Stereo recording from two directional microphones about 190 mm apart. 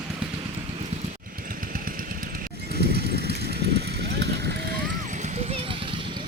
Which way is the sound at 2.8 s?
55° right (ahead or behind).